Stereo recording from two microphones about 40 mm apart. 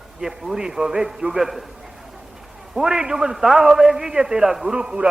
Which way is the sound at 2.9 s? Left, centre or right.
Centre.